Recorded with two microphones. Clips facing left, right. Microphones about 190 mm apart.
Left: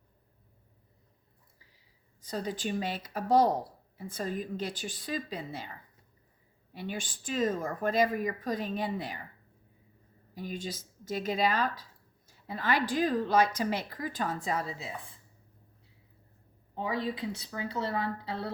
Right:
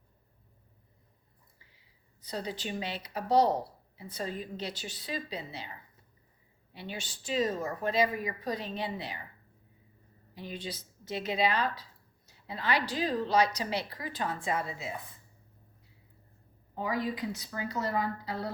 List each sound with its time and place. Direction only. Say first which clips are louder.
2.2 s speech: left 3 dB; 45° left (ahead or behind)
6.7 s speech: left 4 dB; 50° left (ahead or behind)
10.3 s speech: left 2 dB; 45° left (ahead or behind)
16.7 s speech: even; 25° left (ahead or behind)